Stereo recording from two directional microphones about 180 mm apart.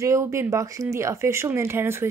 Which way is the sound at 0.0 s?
15° right (ahead or behind).